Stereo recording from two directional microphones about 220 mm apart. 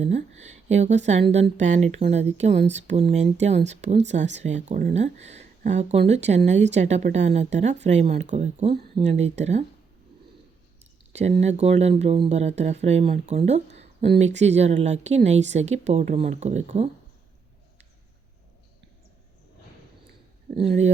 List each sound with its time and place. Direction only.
0.0 s speech: 30° right (ahead or behind)
11.1 s speech: 30° right (ahead or behind)
20.6 s speech: 30° right (ahead or behind)